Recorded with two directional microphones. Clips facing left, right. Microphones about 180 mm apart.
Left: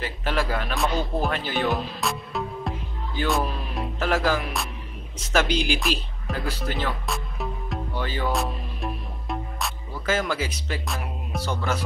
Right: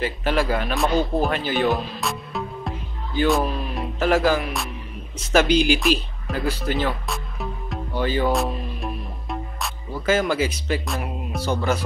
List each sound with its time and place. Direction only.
0.0 s speech: 5° right (ahead or behind)
4.0 s music: 10° right (ahead or behind)
5.3 s speech: 5° right (ahead or behind)
8.3 s music: centre (ahead or behind)